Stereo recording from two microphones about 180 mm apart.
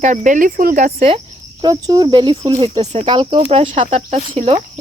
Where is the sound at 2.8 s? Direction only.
35° right (ahead or behind).